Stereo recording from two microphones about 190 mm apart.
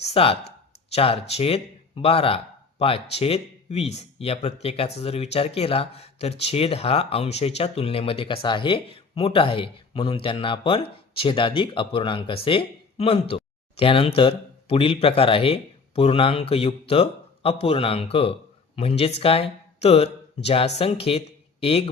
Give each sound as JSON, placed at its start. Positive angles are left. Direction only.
{"t": 0.1, "sound": "a man's voice", "side_deg": 30}